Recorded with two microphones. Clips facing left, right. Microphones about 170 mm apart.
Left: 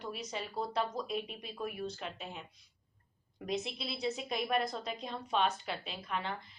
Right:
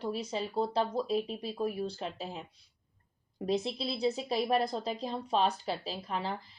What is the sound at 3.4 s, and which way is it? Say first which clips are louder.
A woman's voice: right 6 dB; 30° right (ahead or behind).